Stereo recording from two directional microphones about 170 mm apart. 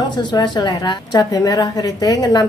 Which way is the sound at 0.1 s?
25° left (ahead or behind).